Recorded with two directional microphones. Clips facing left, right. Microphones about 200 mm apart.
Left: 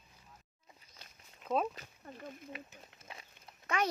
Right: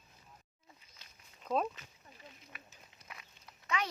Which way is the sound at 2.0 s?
55° left (ahead or behind).